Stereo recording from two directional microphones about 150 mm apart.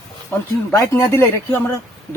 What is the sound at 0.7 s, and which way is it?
Speech, 15° left (ahead or behind).